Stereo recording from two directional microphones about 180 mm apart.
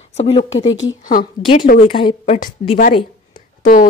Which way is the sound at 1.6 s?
50° left (ahead or behind).